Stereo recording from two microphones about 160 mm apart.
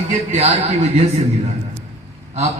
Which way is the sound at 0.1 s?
45° right (ahead or behind).